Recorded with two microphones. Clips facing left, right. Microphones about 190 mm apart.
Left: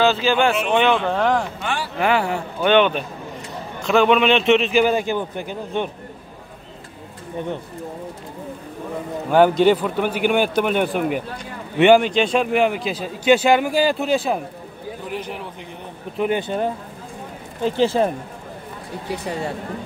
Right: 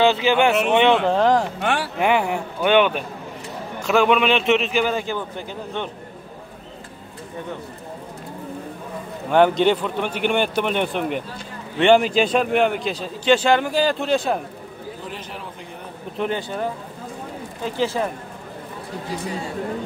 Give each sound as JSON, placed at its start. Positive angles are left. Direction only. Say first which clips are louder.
{"t": 0.0, "sound": "speech", "louder": "right 1 dB", "side_deg": -20}
{"t": 1.6, "sound": "speech", "louder": "right 3 dB", "side_deg": -65}
{"t": 2.0, "sound": "a man's voice", "louder": "left 2 dB", "side_deg": -15}
{"t": 4.7, "sound": "a man's voice", "louder": "left 4 dB", "side_deg": 10}
{"t": 9.3, "sound": "a man's voice", "louder": "left 2 dB", "side_deg": 5}
{"t": 16.2, "sound": "speech", "louder": "left 4 dB", "side_deg": 15}
{"t": 17.7, "sound": "speech", "louder": "left 4 dB", "side_deg": 25}